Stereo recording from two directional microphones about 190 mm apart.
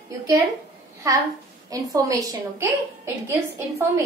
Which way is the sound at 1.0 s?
15° right (ahead or behind).